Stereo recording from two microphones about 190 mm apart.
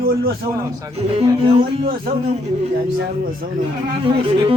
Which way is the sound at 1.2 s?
30° right (ahead or behind).